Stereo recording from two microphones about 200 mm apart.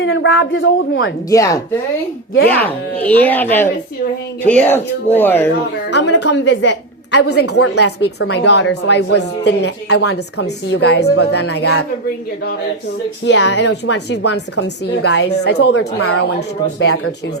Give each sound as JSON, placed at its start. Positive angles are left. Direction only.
{"t": 0.0, "sound": "speech", "side_deg": 75}
{"t": 1.3, "sound": "speech", "side_deg": 15}
{"t": 5.9, "sound": "a woman's voice", "side_deg": 60}
{"t": 13.2, "sound": "a woman's voice", "side_deg": 60}
{"t": 16.8, "sound": "speech", "side_deg": 90}